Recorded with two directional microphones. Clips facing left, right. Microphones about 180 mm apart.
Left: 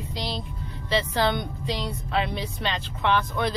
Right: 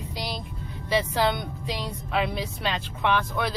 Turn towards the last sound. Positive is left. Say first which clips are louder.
# left 1 dB
turn(degrees=-10)  # may be behind; listen again after turning